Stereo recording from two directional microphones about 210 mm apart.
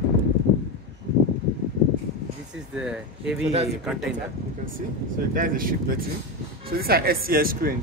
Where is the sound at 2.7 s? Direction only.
5° right (ahead or behind).